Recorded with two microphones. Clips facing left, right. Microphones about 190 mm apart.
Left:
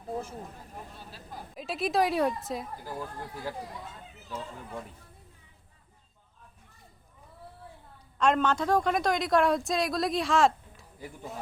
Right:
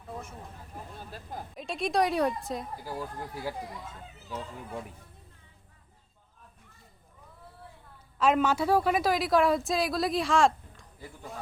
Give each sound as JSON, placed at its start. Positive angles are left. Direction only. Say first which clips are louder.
{"t": 0.0, "sound": "vehicle", "louder": "left 6 dB", "side_deg": 35}
{"t": 1.5, "sound": "a woman's voice", "louder": "even", "side_deg": 5}
{"t": 8.2, "sound": "a woman's voice", "louder": "right 1 dB", "side_deg": -5}